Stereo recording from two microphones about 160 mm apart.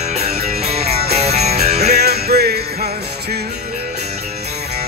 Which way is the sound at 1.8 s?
90° right.